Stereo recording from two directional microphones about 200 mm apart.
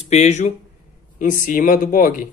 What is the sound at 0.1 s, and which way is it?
Speech, 35° left (ahead or behind).